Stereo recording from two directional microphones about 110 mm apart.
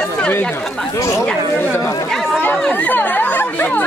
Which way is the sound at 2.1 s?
Centre (ahead or behind).